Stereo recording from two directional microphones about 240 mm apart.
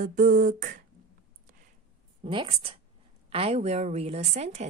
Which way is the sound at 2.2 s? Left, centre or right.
Right.